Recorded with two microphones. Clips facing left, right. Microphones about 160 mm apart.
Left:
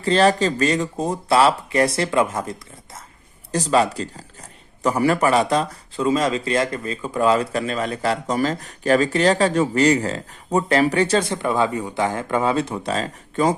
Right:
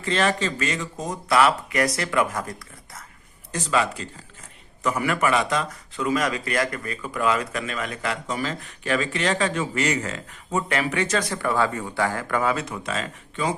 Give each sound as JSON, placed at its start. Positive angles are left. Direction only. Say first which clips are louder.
{"t": 0.0, "sound": "speech", "louder": "left 6 dB", "side_deg": 35}
{"t": 3.5, "sound": "speech", "louder": "left 5 dB", "side_deg": 35}